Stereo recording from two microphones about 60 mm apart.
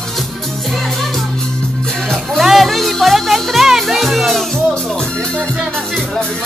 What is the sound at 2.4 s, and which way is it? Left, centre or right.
Music, centre.